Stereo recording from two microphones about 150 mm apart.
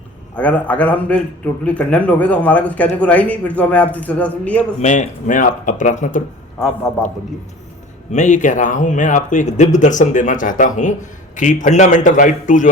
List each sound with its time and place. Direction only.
0.3 s a man's voice: 10° left (ahead or behind)
4.8 s speech: 55° left (ahead or behind)
8.1 s speech: 55° left (ahead or behind)